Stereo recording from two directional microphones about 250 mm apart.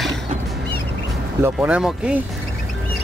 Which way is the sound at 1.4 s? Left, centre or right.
Centre.